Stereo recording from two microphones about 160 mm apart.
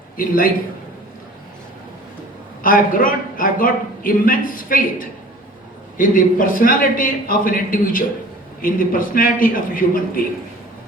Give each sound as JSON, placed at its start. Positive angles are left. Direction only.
{"t": 0.2, "sound": "a man's voice", "side_deg": 60}
{"t": 2.6, "sound": "a man's voice", "side_deg": 60}